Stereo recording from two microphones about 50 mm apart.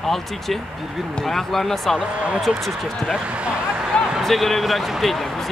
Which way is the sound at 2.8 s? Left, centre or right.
Centre.